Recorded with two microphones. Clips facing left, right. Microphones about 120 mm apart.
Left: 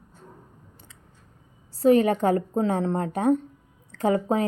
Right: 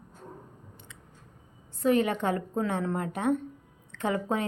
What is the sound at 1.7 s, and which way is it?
Speech, 35° left (ahead or behind).